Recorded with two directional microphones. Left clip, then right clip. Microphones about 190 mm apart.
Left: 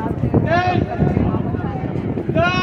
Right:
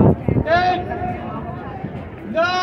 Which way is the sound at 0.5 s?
30° right (ahead or behind).